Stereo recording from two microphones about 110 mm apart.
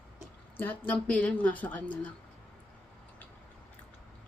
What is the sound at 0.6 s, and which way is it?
A woman's voice, 15° left (ahead or behind).